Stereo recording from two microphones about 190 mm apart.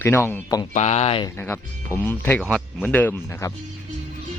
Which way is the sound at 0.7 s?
35° left (ahead or behind).